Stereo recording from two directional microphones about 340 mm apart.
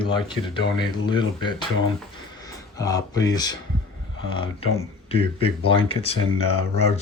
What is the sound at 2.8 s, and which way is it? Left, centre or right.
Speech, centre.